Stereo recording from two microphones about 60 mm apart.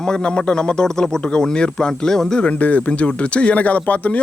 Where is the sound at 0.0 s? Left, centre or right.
Centre.